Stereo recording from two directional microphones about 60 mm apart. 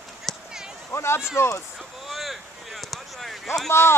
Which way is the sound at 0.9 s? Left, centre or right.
Left.